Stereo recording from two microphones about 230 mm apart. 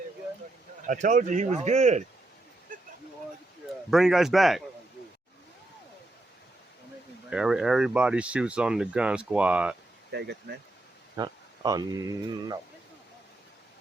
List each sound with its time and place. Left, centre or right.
0.9 s speech: right
3.8 s speech: centre
7.3 s speech: centre
10.1 s speech: right
11.2 s speech: centre